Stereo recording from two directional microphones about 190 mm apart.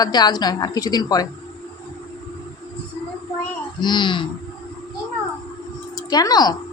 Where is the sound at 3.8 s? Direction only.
25° left (ahead or behind).